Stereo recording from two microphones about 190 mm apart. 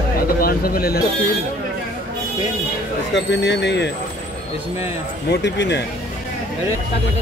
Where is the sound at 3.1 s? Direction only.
65° left (ahead or behind).